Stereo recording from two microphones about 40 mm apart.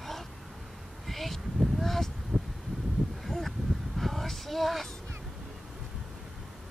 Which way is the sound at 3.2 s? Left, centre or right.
Centre.